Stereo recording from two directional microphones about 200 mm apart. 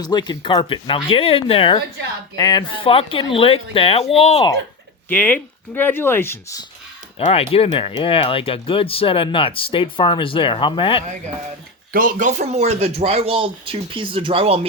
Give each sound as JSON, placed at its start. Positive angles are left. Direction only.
{"t": 0.0, "sound": "speech", "side_deg": 20}
{"t": 5.1, "sound": "speech", "side_deg": 10}
{"t": 7.2, "sound": "speech", "side_deg": 30}
{"t": 11.9, "sound": "speech", "side_deg": -45}